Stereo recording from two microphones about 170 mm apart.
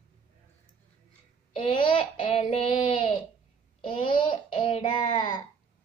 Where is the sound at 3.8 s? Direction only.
30° left (ahead or behind).